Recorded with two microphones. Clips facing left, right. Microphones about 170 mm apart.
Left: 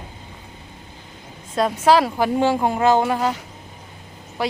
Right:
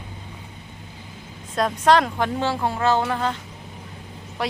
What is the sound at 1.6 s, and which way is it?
Speech, 5° left (ahead or behind).